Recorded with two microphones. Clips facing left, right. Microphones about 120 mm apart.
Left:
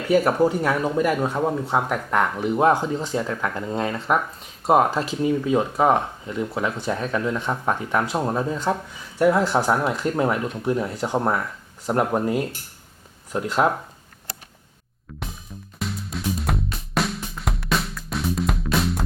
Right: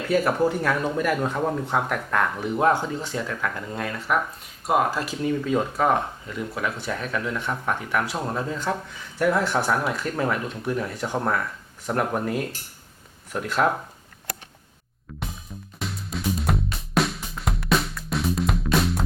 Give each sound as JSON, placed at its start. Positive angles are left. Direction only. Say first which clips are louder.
{"t": 0.1, "sound": "speech", "louder": "left 3 dB", "side_deg": 15}
{"t": 15.8, "sound": "music", "louder": "left 1 dB", "side_deg": 0}